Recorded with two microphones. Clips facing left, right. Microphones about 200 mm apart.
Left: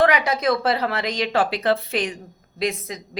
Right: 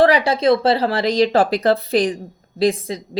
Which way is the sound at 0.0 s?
30° right (ahead or behind).